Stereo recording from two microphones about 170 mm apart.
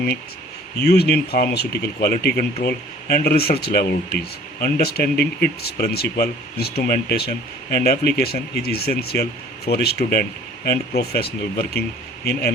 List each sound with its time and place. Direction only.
0.8 s speech: 70° left (ahead or behind)